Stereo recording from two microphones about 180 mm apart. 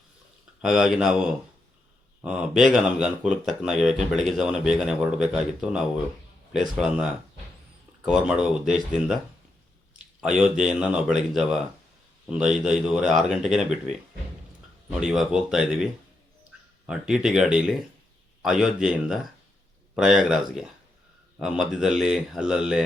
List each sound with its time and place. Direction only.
0.6 s speech: 5° right (ahead or behind)
14.8 s speech: 5° right (ahead or behind)